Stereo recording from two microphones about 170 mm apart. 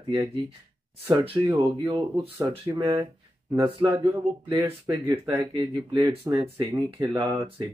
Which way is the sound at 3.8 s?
20° right (ahead or behind).